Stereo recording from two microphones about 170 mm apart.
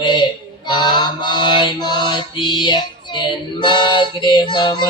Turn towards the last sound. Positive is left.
turn(degrees=25)  # may be behind; listen again after turning